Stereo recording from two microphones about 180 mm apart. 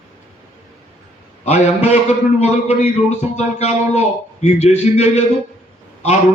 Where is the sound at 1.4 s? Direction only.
40° left (ahead or behind).